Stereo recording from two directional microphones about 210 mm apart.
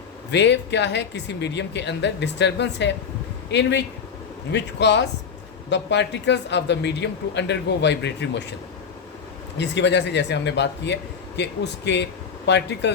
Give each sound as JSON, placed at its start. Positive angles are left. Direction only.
{"t": 0.3, "sound": "speech", "side_deg": 55}
{"t": 9.6, "sound": "speech", "side_deg": 55}